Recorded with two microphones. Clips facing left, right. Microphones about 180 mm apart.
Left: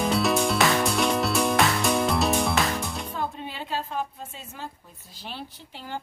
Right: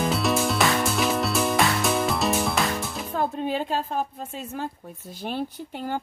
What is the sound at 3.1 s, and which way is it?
Music, 45° right (ahead or behind).